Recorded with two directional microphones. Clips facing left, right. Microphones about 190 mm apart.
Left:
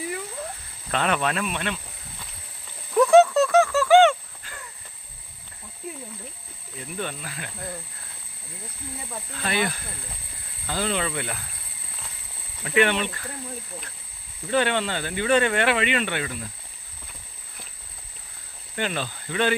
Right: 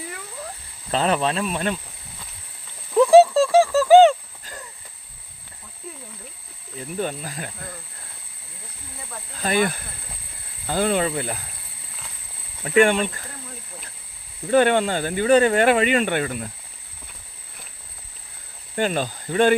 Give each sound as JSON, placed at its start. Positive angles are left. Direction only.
{"t": 0.9, "sound": "speech", "side_deg": -30}
{"t": 2.9, "sound": "a sound", "side_deg": -30}
{"t": 6.7, "sound": "speech", "side_deg": -40}
{"t": 9.3, "sound": "speech", "side_deg": -40}
{"t": 12.7, "sound": "speech", "side_deg": -45}
{"t": 14.5, "sound": "speech", "side_deg": -45}
{"t": 18.8, "sound": "speech", "side_deg": -45}